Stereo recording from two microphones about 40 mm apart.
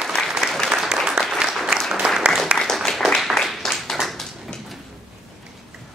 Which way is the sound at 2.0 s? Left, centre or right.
Right.